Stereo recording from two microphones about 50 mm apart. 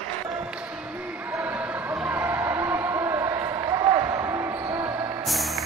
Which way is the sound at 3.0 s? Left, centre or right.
Right.